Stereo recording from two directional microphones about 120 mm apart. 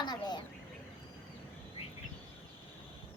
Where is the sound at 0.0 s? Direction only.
35° left (ahead or behind).